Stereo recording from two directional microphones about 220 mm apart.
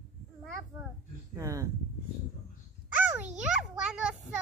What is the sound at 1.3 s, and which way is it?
Speech, 15° right (ahead or behind).